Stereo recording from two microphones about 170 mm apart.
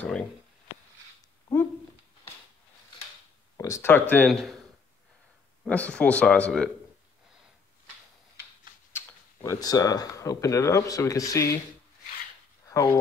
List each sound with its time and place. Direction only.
0.0 s speech: 10° left (ahead or behind)
3.5 s speech: 15° left (ahead or behind)
4.3 s speech: centre (ahead or behind)
5.7 s speech: 5° left (ahead or behind)
8.9 s speech: 15° left (ahead or behind)
12.6 s speech: 15° left (ahead or behind)